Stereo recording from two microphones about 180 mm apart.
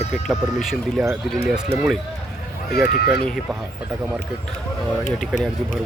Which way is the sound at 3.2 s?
Centre (ahead or behind).